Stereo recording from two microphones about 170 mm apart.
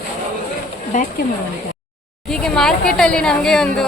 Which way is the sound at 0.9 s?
50° left (ahead or behind).